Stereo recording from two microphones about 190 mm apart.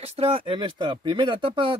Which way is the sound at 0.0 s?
30° right (ahead or behind).